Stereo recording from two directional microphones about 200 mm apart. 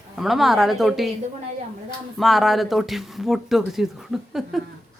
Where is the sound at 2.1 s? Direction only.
Centre (ahead or behind).